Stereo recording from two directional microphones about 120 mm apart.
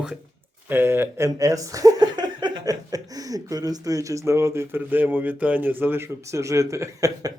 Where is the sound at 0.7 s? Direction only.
20° right (ahead or behind).